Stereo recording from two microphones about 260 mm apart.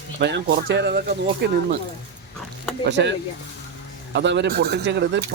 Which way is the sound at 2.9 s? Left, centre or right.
Right.